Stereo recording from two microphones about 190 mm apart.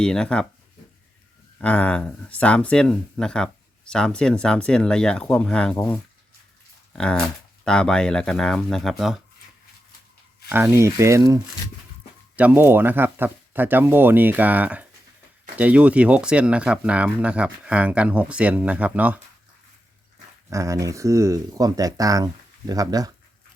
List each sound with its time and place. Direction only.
0.0 s speech: 5° left (ahead or behind)
1.6 s speech: 5° left (ahead or behind)
10.5 s speech: 10° right (ahead or behind)
12.4 s speech: 10° right (ahead or behind)
20.5 s speech: 15° right (ahead or behind)